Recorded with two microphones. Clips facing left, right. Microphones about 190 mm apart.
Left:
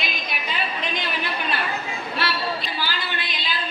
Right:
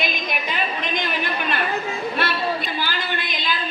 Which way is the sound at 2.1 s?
50° right (ahead or behind).